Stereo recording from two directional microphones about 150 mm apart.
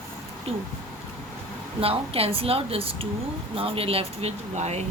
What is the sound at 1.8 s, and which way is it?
Speech, 40° right (ahead or behind).